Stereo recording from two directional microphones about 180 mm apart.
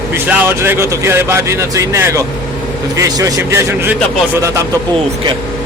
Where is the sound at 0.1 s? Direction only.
15° right (ahead or behind).